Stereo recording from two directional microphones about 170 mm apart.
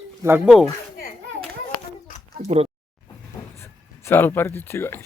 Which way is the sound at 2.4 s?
40° right (ahead or behind).